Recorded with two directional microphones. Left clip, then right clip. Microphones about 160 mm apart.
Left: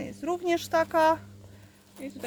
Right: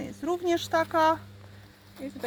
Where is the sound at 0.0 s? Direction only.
Centre (ahead or behind).